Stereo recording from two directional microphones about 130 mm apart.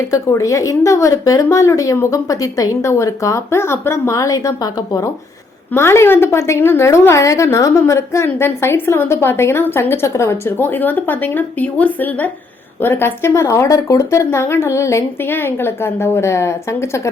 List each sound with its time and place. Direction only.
0.1 s a woman's voice: 25° left (ahead or behind)